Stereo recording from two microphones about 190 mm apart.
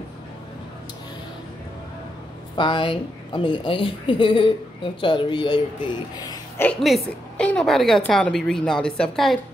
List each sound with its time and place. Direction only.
2.5 s a woman's voice: 25° left (ahead or behind)
6.6 s a woman's voice: 5° left (ahead or behind)